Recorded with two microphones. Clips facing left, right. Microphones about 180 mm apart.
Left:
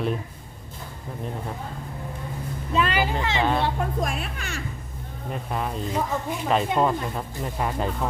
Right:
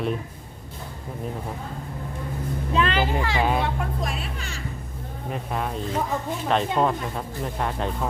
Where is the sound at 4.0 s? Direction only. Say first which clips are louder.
Left 2 dB; 50° left (ahead or behind).